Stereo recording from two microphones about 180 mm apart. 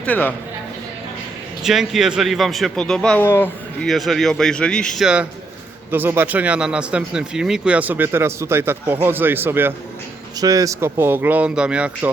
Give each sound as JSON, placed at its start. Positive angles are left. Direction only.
{"t": 0.0, "sound": "a man's voice", "side_deg": 10}
{"t": 1.6, "sound": "a man's voice", "side_deg": 0}